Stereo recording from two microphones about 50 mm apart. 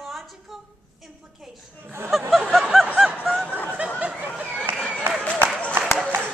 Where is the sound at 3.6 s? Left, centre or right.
Right.